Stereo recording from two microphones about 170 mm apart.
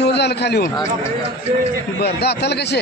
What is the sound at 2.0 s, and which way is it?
Speech, 75° left (ahead or behind).